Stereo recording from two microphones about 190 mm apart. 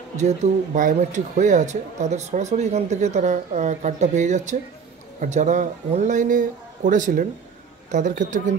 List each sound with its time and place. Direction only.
0.2 s speech: 40° right (ahead or behind)